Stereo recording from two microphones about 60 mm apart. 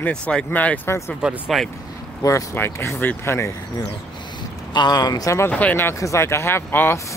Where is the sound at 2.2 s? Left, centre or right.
Left.